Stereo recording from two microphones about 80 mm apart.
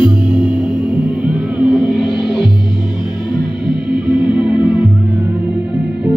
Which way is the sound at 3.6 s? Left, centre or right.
Left.